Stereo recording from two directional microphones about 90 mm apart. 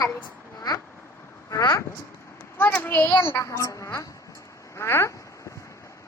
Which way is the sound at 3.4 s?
35° left (ahead or behind).